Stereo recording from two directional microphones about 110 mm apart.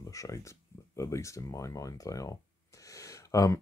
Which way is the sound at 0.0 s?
30° left (ahead or behind).